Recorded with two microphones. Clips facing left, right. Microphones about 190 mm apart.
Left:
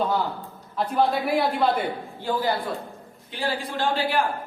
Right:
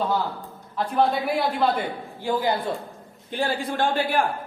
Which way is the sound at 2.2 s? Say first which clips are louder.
Right 2 dB; 15° right (ahead or behind).